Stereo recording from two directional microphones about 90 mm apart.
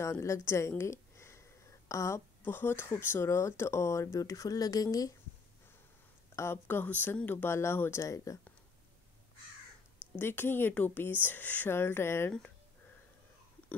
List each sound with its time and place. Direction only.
0.0 s a woman's voice: 35° left (ahead or behind)
6.3 s speech: 30° left (ahead or behind)
10.1 s speech: 25° left (ahead or behind)